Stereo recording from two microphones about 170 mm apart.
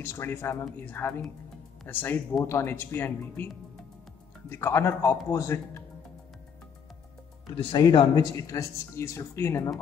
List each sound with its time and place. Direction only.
0.0 s speech: 15° left (ahead or behind)
4.5 s speech: 15° left (ahead or behind)
7.5 s speech: 25° left (ahead or behind)